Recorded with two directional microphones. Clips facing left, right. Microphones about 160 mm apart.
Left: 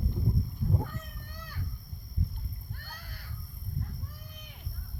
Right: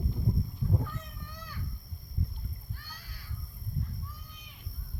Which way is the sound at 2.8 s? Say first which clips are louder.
Left 3 dB; 55° left (ahead or behind).